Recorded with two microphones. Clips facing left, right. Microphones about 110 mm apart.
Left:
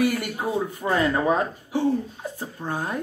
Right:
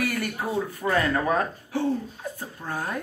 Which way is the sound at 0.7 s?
20° left (ahead or behind).